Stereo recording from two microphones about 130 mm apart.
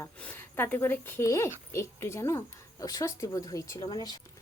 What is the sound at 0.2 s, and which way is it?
Speech, 15° left (ahead or behind).